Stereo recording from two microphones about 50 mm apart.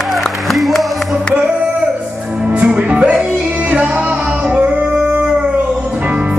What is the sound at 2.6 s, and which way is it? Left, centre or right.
Music, right.